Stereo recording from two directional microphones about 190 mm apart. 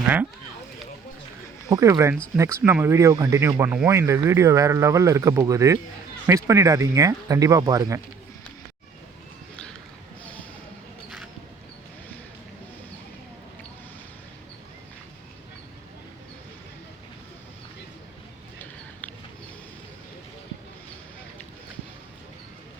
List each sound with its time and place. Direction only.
1.7 s speech: 15° right (ahead or behind)